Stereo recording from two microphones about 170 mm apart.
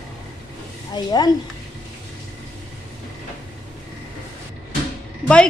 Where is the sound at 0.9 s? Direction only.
25° left (ahead or behind).